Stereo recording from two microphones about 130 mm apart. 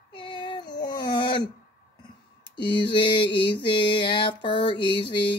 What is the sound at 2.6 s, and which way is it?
Mantra, 40° left (ahead or behind).